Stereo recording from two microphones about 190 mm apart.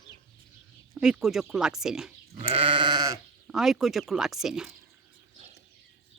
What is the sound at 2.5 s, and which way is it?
Sheep, 30° right (ahead or behind).